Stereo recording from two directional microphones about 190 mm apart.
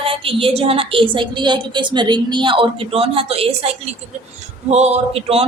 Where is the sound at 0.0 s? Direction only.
30° right (ahead or behind).